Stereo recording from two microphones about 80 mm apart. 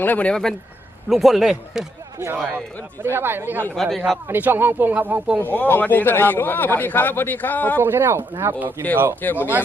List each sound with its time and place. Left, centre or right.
0.0 s speech: centre
1.1 s speech: centre
2.1 s a man's voice: right
3.8 s speech: centre
4.3 s speech: right
5.4 s a man's voice: left
7.8 s speech: right
9.2 s a man's voice: left